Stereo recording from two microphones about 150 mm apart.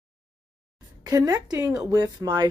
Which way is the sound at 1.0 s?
25° right (ahead or behind).